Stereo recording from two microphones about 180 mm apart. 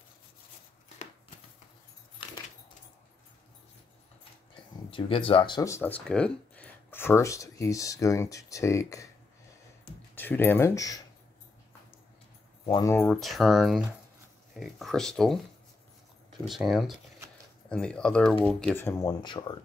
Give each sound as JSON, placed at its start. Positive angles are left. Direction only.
{"t": 4.9, "sound": "speech", "side_deg": 30}
{"t": 10.1, "sound": "speech", "side_deg": 10}
{"t": 12.6, "sound": "speech", "side_deg": 25}
{"t": 13.1, "sound": "speech", "side_deg": 0}
{"t": 16.4, "sound": "speech", "side_deg": 0}